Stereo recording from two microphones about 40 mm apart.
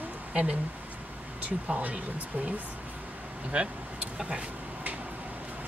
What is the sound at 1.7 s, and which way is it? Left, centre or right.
Speech, right.